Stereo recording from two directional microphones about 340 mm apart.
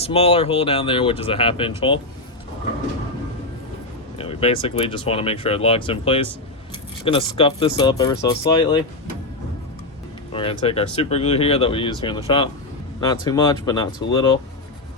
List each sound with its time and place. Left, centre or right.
0.0 s speech: centre
4.2 s speech: centre
10.3 s speech: centre